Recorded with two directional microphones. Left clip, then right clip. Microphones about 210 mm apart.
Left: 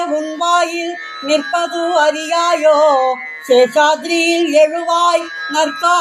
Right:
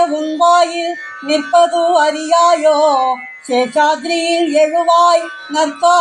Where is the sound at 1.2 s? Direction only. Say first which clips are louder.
Right 4 dB; 20° left (ahead or behind).